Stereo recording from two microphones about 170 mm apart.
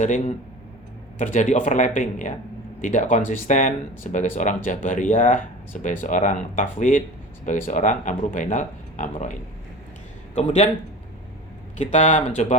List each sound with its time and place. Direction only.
0.0 s speech: 45° left (ahead or behind)
11.8 s speech: 45° left (ahead or behind)